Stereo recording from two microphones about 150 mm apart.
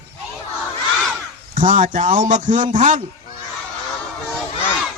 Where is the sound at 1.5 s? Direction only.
60° right (ahead or behind).